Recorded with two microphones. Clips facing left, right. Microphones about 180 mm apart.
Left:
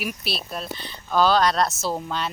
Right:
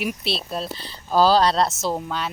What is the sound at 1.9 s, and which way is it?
Speech, 10° right (ahead or behind).